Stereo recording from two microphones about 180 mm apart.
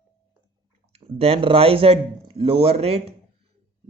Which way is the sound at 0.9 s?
35° right (ahead or behind).